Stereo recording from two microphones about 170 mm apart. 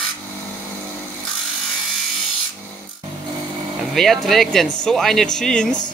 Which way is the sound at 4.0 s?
Centre (ahead or behind).